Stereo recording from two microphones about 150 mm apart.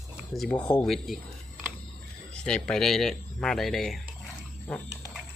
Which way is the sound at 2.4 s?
5° left (ahead or behind).